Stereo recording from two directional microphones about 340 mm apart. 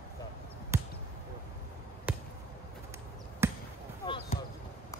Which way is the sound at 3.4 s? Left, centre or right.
Centre.